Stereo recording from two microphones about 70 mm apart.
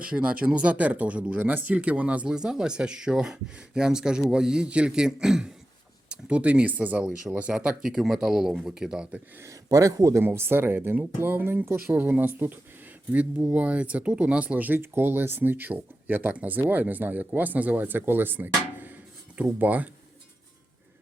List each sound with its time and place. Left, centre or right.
0.0 s speech: centre
7.5 s speech: centre
9.6 s speech: right
10.2 s speech: right
13.1 s speech: centre